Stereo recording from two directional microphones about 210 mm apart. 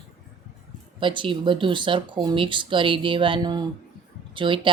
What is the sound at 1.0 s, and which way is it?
Speech, 25° right (ahead or behind).